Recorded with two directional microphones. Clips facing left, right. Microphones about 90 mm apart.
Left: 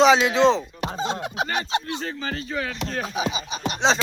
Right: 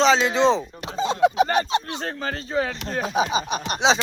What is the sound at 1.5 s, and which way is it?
Speech, 45° right (ahead or behind).